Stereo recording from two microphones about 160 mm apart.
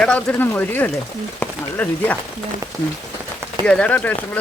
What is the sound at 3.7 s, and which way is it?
Speech, 10° left (ahead or behind).